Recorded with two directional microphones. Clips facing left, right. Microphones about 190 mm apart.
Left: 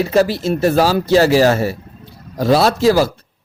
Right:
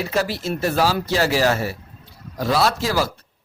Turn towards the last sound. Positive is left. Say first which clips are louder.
# left 8 dB
turn(degrees=30)  # may be behind; listen again after turning